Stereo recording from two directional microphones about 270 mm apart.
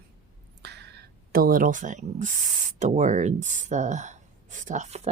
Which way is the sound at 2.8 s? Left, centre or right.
Right.